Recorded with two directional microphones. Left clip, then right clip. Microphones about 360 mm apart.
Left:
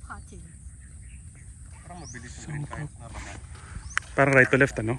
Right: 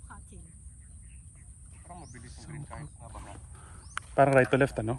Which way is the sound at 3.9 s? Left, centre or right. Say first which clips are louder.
Left 3 dB; centre.